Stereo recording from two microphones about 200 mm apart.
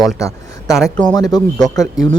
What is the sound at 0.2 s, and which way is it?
Speech, 15° left (ahead or behind).